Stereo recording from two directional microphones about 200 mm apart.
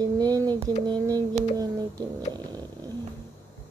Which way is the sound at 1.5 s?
20° right (ahead or behind).